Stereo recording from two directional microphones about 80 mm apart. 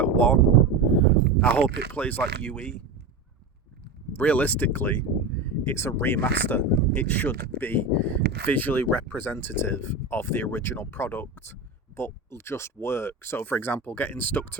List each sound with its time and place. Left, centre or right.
0.0 s a sound: centre
0.9 s speech: centre
4.1 s speech: centre